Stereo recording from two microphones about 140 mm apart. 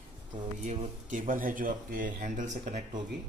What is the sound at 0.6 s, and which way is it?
A man's voice, 65° right (ahead or behind).